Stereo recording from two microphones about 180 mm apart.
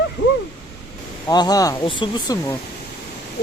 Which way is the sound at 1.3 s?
20° left (ahead or behind).